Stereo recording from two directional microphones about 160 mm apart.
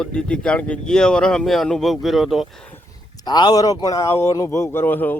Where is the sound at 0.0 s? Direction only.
5° left (ahead or behind).